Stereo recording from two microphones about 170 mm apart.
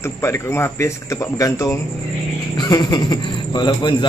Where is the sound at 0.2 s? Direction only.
15° left (ahead or behind).